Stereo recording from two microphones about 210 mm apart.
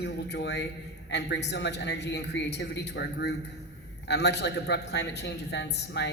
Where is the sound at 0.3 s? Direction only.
55° left (ahead or behind).